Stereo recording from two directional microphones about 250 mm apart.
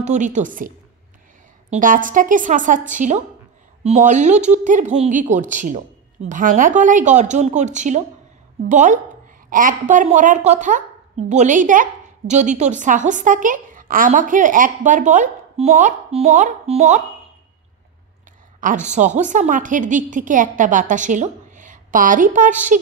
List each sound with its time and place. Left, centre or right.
0.0 s a woman's voice: right
18.6 s a woman's voice: right